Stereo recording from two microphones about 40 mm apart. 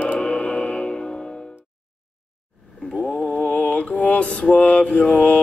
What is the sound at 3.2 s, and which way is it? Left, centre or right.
Mantra, left.